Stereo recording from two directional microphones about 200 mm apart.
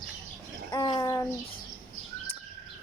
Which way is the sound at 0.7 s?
20° left (ahead or behind).